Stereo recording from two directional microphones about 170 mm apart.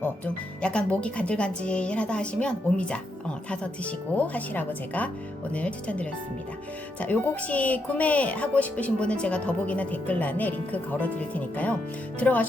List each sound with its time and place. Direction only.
0.6 s speech: 5° left (ahead or behind)